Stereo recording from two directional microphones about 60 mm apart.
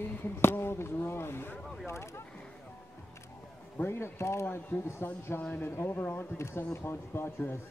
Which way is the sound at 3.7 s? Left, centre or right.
Left.